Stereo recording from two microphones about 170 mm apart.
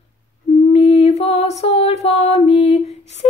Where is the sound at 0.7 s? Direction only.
35° left (ahead or behind).